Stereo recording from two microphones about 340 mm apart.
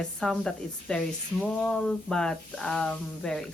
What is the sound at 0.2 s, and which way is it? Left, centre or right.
Speech, centre.